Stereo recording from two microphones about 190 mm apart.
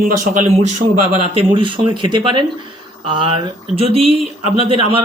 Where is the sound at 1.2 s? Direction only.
30° right (ahead or behind).